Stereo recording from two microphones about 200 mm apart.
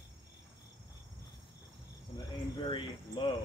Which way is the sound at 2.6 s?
25° left (ahead or behind).